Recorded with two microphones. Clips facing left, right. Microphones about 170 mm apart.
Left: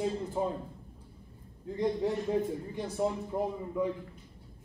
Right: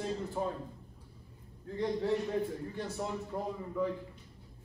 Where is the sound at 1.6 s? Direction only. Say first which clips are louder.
Left 3 dB; 15° left (ahead or behind).